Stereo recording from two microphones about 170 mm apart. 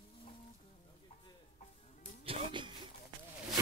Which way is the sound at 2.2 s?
30° right (ahead or behind).